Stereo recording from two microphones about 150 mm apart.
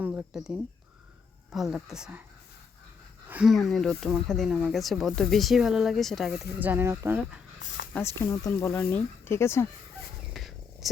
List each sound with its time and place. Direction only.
0.0 s speech: 5° right (ahead or behind)
3.2 s a sound: 10° right (ahead or behind)
3.5 s speech: centre (ahead or behind)
6.6 s speech: 15° right (ahead or behind)
7.9 s speech: 15° left (ahead or behind)
10.3 s cricket: centre (ahead or behind)